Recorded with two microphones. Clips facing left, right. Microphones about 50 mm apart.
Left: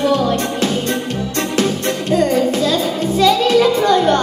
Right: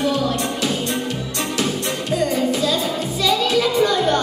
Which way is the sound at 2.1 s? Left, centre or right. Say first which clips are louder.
Left 5 dB; left.